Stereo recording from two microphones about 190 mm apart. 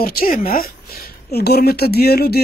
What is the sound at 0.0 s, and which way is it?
Speech, 50° left (ahead or behind).